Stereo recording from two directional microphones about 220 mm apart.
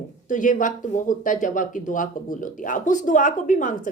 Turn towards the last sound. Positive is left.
turn(degrees=35)  # may be behind; listen again after turning